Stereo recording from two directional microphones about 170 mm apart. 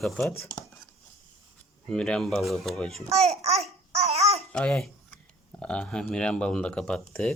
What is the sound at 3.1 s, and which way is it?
Babbling, 40° right (ahead or behind).